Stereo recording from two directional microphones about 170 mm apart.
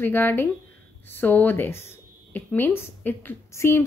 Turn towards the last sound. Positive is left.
turn(degrees=15)  # may be behind; listen again after turning